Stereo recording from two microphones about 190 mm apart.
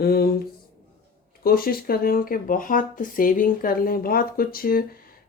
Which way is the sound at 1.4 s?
50° left (ahead or behind).